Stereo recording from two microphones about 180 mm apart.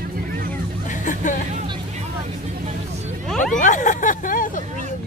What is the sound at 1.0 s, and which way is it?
Music, 45° left (ahead or behind).